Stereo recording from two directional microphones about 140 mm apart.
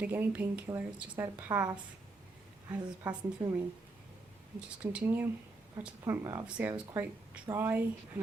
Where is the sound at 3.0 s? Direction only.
10° right (ahead or behind).